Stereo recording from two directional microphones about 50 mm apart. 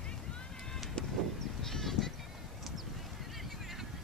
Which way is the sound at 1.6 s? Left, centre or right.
Centre.